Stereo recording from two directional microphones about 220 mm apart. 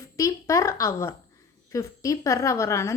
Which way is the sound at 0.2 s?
15° left (ahead or behind).